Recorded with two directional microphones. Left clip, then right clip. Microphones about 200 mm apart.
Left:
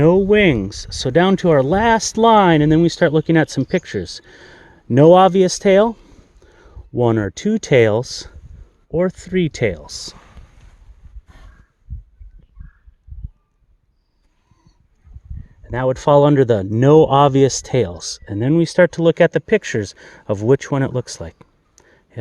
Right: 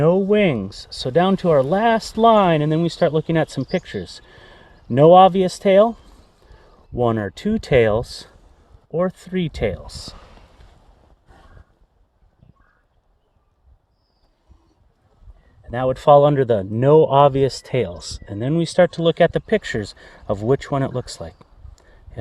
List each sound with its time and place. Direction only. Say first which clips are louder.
0.0 s speech: left 3 dB; 50° left (ahead or behind)
15.6 s speech: right 1 dB; 40° left (ahead or behind)